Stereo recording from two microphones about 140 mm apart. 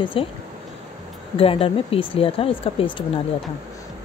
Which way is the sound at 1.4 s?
40° left (ahead or behind).